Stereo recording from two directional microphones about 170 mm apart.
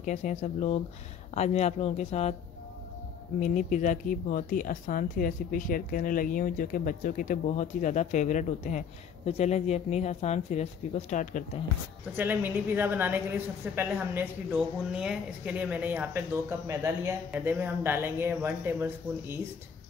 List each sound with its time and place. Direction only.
0.0 s speech: 45° left (ahead or behind)
3.3 s speech: 45° left (ahead or behind)
12.2 s speech: 10° right (ahead or behind)